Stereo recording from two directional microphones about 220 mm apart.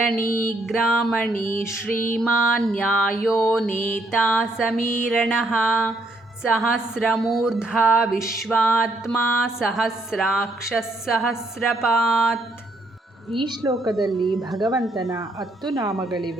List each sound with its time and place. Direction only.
0.1 s music: 5° left (ahead or behind)
15.7 s a woman's voice: 15° right (ahead or behind)
16.0 s music: centre (ahead or behind)